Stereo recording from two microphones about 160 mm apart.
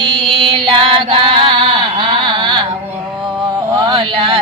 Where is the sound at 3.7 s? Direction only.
30° right (ahead or behind).